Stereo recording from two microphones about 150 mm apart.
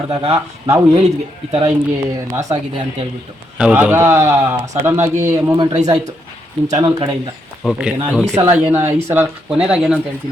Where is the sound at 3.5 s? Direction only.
5° right (ahead or behind).